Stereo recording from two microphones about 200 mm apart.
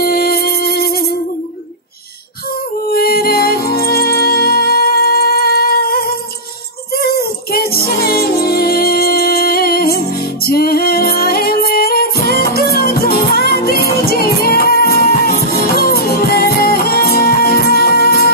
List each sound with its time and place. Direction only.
0.0 s music: 50° left (ahead or behind)
2.9 s music: 50° left (ahead or behind)